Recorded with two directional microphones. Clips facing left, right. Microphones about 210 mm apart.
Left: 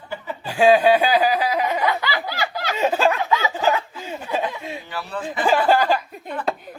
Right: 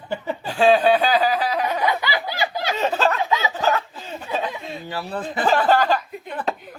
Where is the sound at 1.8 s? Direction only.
15° right (ahead or behind).